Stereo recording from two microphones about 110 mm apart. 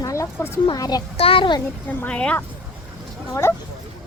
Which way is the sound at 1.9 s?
15° left (ahead or behind).